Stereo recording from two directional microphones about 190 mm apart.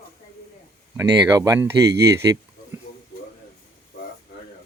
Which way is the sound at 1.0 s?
15° right (ahead or behind).